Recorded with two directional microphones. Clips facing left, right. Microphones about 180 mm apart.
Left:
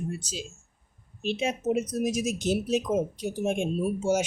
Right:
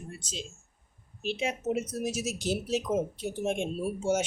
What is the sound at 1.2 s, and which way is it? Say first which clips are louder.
A woman's voice: left 3 dB; 20° left (ahead or behind).